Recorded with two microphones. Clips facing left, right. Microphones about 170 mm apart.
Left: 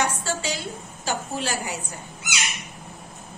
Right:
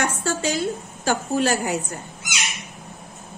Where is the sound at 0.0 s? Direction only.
45° right (ahead or behind).